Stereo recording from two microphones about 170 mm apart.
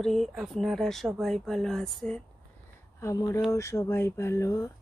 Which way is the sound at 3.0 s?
20° left (ahead or behind).